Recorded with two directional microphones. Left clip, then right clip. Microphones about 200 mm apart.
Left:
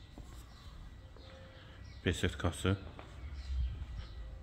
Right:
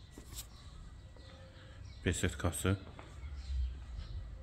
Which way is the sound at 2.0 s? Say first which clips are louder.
Left 1 dB; centre (ahead or behind).